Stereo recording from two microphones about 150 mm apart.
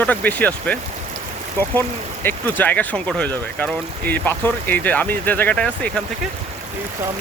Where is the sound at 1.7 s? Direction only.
15° left (ahead or behind).